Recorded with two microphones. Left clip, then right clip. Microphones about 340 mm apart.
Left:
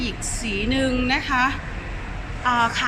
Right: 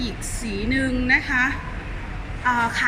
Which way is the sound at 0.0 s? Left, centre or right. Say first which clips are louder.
Left 2 dB; centre.